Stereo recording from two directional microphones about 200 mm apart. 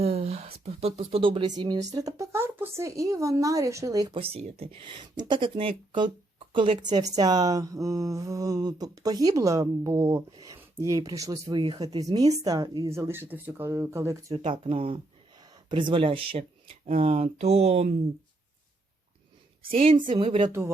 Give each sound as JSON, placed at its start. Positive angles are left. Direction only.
{"t": 0.0, "sound": "speech", "side_deg": -30}
{"t": 14.4, "sound": "speech", "side_deg": -25}
{"t": 19.7, "sound": "speech", "side_deg": -25}